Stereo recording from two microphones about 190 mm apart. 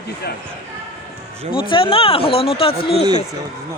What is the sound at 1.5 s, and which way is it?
Speech, 25° left (ahead or behind).